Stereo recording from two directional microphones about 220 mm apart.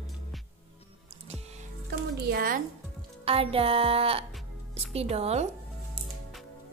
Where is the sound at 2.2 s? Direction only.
40° right (ahead or behind).